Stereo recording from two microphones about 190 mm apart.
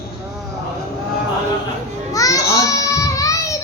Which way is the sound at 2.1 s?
20° left (ahead or behind).